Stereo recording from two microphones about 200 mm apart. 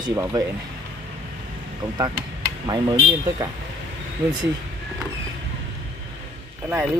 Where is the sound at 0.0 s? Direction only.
15° right (ahead or behind).